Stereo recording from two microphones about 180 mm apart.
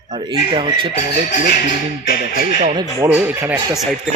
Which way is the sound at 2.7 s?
15° right (ahead or behind).